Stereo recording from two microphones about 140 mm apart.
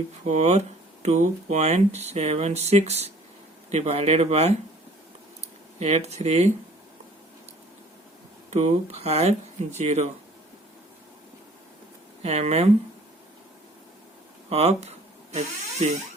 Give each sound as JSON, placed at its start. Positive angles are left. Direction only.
{"t": 0.3, "sound": "speech", "side_deg": -55}
{"t": 5.8, "sound": "speech", "side_deg": -50}
{"t": 8.4, "sound": "speech", "side_deg": -55}
{"t": 12.2, "sound": "speech", "side_deg": -50}
{"t": 14.5, "sound": "speech", "side_deg": -50}